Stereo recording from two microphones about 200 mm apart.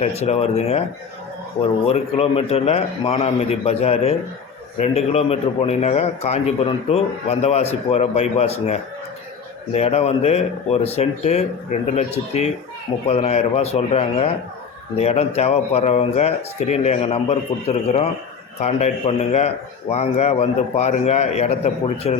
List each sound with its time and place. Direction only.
0.0 s a man's voice: 30° left (ahead or behind)